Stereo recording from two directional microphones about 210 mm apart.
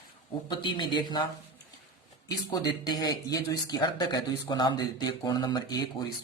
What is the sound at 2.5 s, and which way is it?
Speech, 20° left (ahead or behind).